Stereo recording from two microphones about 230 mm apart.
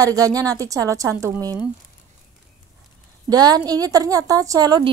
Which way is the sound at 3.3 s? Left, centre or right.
Centre.